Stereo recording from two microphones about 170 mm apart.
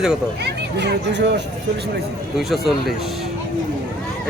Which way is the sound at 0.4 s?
85° right.